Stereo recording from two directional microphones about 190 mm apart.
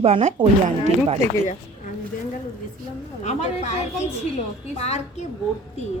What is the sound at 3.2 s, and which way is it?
A woman's voice, 35° left (ahead or behind).